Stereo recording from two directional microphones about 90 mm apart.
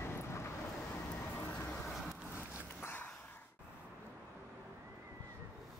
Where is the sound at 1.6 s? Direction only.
20° left (ahead or behind).